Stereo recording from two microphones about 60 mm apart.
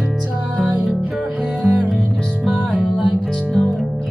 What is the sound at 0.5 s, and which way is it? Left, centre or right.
Music, right.